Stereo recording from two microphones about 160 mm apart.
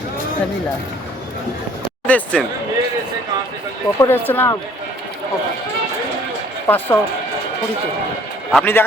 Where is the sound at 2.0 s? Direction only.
10° left (ahead or behind).